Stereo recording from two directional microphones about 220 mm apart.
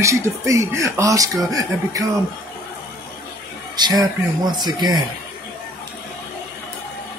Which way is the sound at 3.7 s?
20° right (ahead or behind).